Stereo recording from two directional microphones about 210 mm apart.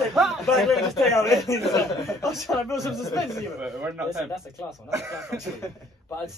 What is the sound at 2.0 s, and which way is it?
Speech, 15° left (ahead or behind).